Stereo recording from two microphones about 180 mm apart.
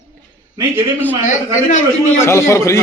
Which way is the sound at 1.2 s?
45° left (ahead or behind).